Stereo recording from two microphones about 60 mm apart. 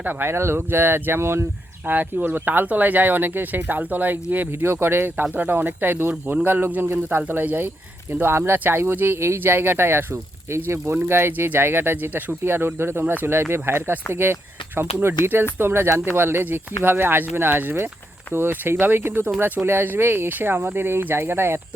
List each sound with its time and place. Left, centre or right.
0.0 s speech: right
1.9 s speech: right
10.9 s speech: right